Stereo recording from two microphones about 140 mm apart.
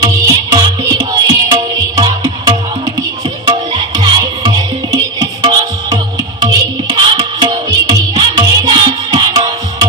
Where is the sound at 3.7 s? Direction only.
35° right (ahead or behind).